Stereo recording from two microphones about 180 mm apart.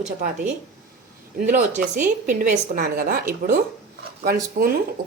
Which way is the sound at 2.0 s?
45° right (ahead or behind).